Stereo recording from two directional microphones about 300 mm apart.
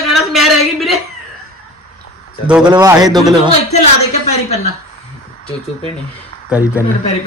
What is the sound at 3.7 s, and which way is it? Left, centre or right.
Speech, left.